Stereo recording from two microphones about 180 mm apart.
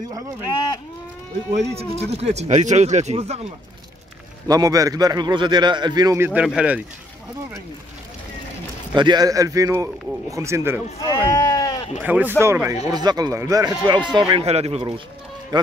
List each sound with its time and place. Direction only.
0.5 s a sound: 25° left (ahead or behind)
1.5 s speech: 35° right (ahead or behind)
4.5 s a man's voice: 20° right (ahead or behind)
8.9 s a man's voice: 25° right (ahead or behind)
11.0 s sheep: 20° left (ahead or behind)
12.0 s a man's voice: 10° right (ahead or behind)